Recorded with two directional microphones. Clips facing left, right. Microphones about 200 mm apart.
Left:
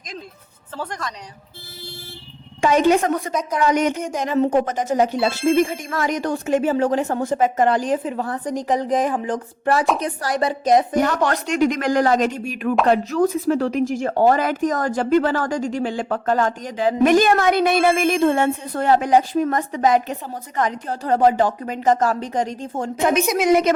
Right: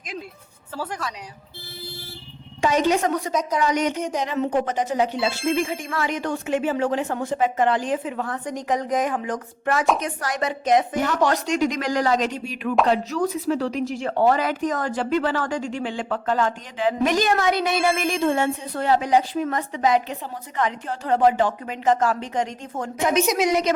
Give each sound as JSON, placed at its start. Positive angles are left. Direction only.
{"t": 0.8, "sound": "a woman's voice", "side_deg": -5}
{"t": 2.6, "sound": "a woman's voice", "side_deg": 55}
{"t": 11.3, "sound": "a woman's voice", "side_deg": 55}
{"t": 17.0, "sound": "a woman's voice", "side_deg": 55}
{"t": 23.4, "sound": "a woman's voice", "side_deg": 55}